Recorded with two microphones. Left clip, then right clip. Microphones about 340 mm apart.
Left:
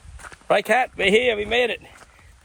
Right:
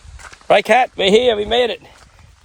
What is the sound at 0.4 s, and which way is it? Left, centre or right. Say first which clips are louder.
Speech: right 7 dB; right.